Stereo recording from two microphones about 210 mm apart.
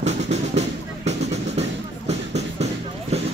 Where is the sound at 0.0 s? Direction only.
30° right (ahead or behind).